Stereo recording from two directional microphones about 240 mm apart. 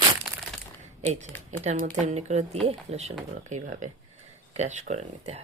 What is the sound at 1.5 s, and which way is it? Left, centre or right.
Speech, right.